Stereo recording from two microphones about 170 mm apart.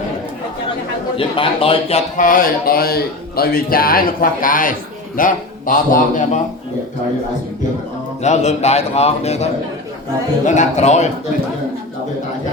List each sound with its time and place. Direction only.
1.1 s a man's voice: 30° left (ahead or behind); by 6.4 s 50° left (ahead or behind)
8.2 s a man's voice: 40° left (ahead or behind)